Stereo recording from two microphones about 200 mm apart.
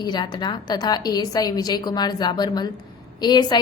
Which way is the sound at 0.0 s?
20° left (ahead or behind).